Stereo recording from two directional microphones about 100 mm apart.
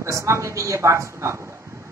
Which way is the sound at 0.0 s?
30° right (ahead or behind).